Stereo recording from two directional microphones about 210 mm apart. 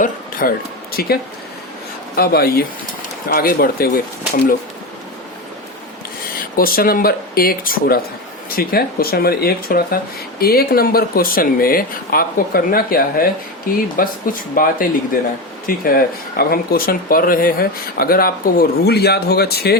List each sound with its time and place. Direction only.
0.0 s a sound: 40° left (ahead or behind)
0.9 s speech: 45° left (ahead or behind)
6.6 s speech: 45° left (ahead or behind)